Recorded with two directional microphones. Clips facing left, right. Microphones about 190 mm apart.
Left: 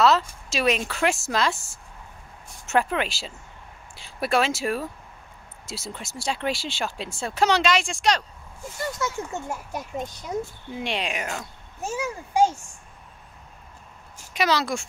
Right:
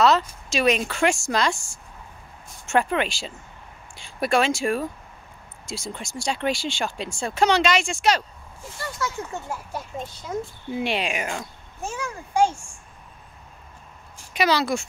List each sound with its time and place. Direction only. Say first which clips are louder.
0.0 s speech: right 1 dB; centre (ahead or behind)
9.0 s a child's voice: right 2 dB; 20° left (ahead or behind)
10.7 s speech: right 5 dB; 5° right (ahead or behind)
14.1 s speech: right 2 dB; centre (ahead or behind)